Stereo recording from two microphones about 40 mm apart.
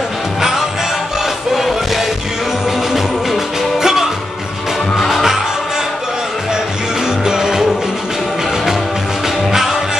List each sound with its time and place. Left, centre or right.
0.4 s music: centre
3.8 s music: centre
4.9 s music: centre
7.2 s music: centre
9.5 s music: centre